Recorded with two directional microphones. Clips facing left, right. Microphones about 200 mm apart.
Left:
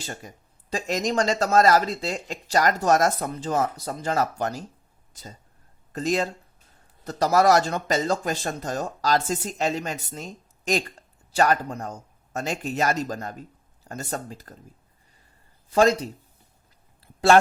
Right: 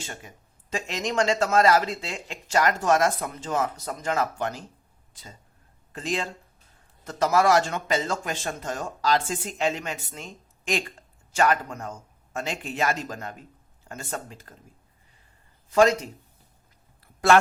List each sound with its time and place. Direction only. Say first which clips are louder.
0.0 s speech: left 3 dB; 40° left (ahead or behind)
15.7 s speech: even; 35° left (ahead or behind)
17.0 s a sound: left 2 dB; 30° left (ahead or behind)